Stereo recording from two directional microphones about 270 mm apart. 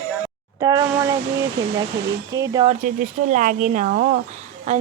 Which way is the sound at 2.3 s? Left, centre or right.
Centre.